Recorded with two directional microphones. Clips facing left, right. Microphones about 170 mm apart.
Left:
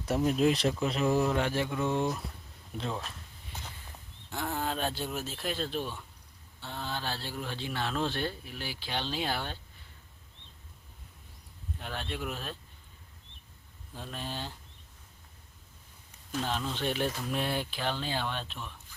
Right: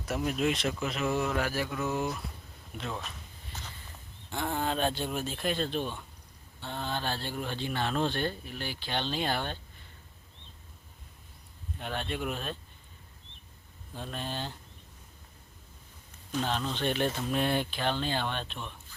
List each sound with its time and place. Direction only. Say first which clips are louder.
0.0 s speech: left 3 dB; 30° left (ahead or behind)
4.3 s speech: right 2 dB; 5° left (ahead or behind)
11.8 s speech: right 3 dB; centre (ahead or behind)
13.9 s speech: right 2 dB; 5° left (ahead or behind)
16.3 s speech: right 2 dB; 5° left (ahead or behind)